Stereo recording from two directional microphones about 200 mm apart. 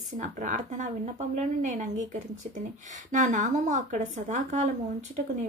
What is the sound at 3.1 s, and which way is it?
A woman's voice, 40° right (ahead or behind).